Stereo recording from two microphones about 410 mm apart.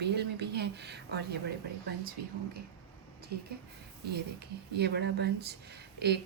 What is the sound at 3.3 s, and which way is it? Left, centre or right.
Speech, right.